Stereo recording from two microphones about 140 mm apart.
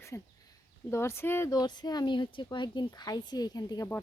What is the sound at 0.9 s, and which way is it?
Speech, 20° left (ahead or behind).